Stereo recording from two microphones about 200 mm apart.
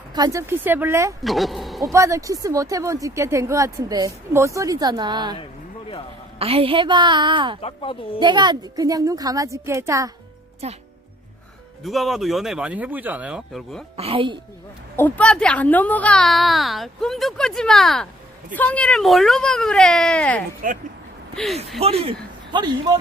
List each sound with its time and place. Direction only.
0.1 s speech: 15° right (ahead or behind)
1.2 s speech: centre (ahead or behind)
1.8 s speech: 15° right (ahead or behind)
6.4 s a woman's voice: 30° right (ahead or behind)
7.6 s speech: 25° left (ahead or behind)
8.2 s speech: 20° right (ahead or behind)
10.6 s speech: 30° right (ahead or behind)
11.8 s a woman's voice: centre (ahead or behind)
13.9 s a woman's voice: 30° right (ahead or behind)
14.9 s a woman's voice: 10° left (ahead or behind)
20.6 s speech: 45° right (ahead or behind)
21.3 s a woman's voice: centre (ahead or behind)
21.8 s a woman's voice: 30° right (ahead or behind)